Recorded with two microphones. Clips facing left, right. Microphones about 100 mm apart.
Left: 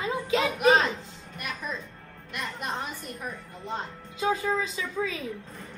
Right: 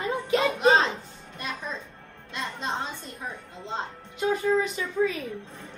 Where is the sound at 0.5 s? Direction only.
25° right (ahead or behind).